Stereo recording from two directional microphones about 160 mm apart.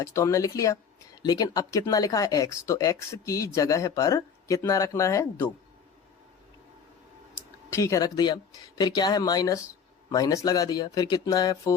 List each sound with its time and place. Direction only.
0.0 s speech: 20° left (ahead or behind)
7.3 s speech: 20° left (ahead or behind)